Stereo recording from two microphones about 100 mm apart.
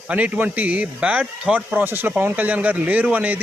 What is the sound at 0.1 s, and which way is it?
A man's voice, 15° right (ahead or behind).